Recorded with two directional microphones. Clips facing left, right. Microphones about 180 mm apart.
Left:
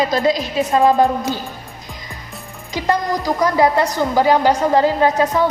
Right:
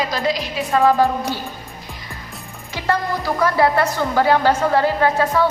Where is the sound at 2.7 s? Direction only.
15° left (ahead or behind).